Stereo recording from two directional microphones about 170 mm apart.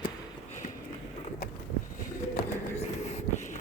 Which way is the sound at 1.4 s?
65° left (ahead or behind).